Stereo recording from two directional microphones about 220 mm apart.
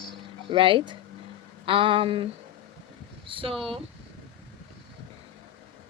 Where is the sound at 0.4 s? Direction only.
25° right (ahead or behind).